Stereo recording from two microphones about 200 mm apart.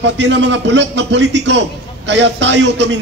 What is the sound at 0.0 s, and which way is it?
A man's voice, 60° right (ahead or behind).